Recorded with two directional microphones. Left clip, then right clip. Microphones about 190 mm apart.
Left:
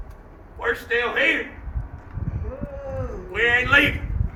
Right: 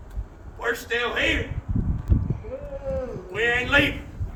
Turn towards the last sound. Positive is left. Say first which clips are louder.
# left 3 dB
turn(degrees=-10)  # may be behind; listen again after turning